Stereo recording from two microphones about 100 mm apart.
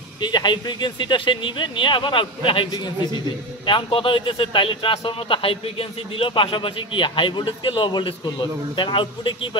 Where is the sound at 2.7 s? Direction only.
45° left (ahead or behind).